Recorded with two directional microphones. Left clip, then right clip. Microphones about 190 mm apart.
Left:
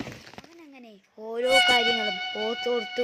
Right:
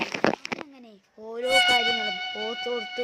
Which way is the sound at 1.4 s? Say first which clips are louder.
Left 1 dB; centre (ahead or behind).